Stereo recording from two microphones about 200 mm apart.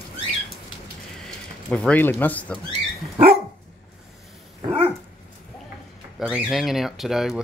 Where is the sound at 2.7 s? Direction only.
30° right (ahead or behind).